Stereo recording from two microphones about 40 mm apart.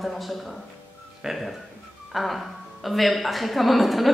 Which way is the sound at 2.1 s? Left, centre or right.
Centre.